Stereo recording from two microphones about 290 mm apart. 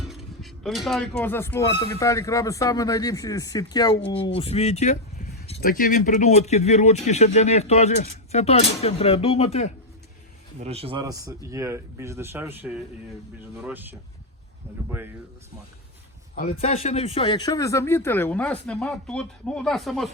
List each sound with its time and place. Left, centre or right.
0.1 s speech: centre; by 9.7 s left
10.6 s speech: right
14.8 s a sound: centre
16.3 s speech: left; by 20.1 s centre